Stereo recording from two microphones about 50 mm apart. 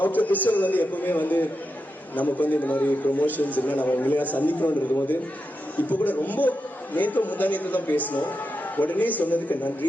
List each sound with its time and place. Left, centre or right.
0.0 s a man's voice: left